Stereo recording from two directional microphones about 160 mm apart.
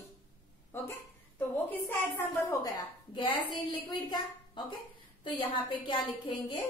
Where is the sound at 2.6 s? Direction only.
30° left (ahead or behind).